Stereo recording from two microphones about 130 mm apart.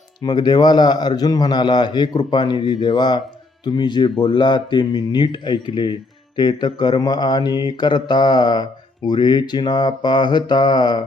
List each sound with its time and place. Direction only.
0.2 s speech: 30° left (ahead or behind)